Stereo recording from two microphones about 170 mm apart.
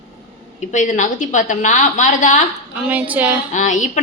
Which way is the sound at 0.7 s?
45° left (ahead or behind).